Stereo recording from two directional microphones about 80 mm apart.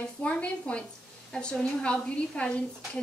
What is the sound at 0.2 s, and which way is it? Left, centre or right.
A woman's voice, centre.